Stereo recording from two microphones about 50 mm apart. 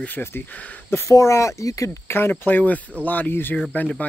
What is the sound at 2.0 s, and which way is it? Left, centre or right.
Speech, left.